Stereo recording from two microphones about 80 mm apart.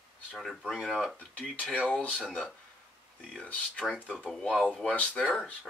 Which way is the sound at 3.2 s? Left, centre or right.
Centre.